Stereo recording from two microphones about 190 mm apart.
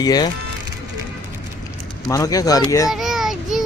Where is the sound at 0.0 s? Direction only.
20° left (ahead or behind).